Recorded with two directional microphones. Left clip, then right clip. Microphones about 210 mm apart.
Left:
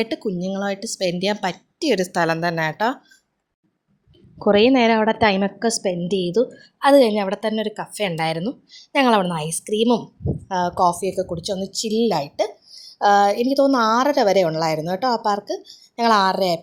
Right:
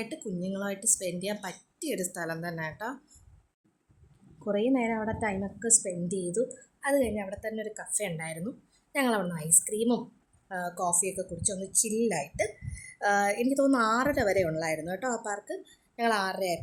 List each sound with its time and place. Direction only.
0.4 s a woman's voice: 25° left (ahead or behind)
4.4 s a woman's voice: 35° left (ahead or behind)